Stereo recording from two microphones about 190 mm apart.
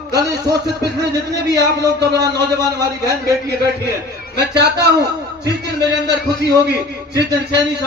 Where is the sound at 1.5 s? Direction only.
60° right (ahead or behind).